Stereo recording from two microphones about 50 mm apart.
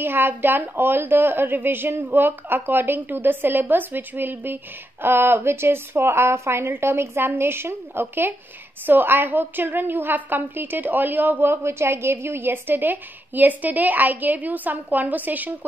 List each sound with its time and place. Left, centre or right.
0.0 s a woman's voice: right
11.6 s a woman's voice: right